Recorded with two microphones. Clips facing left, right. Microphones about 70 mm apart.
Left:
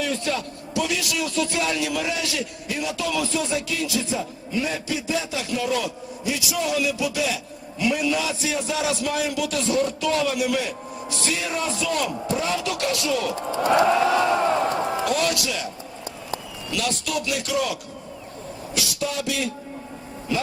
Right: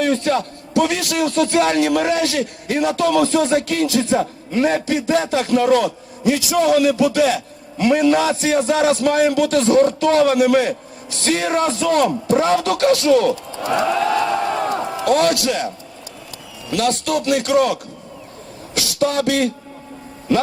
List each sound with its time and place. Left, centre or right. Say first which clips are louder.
0.0 s a man's voice: right 8 dB; right
13.6 s crowd: left 2 dB; left
15.0 s a man's voice: right 7 dB; right
16.7 s a man's voice: right 8 dB; right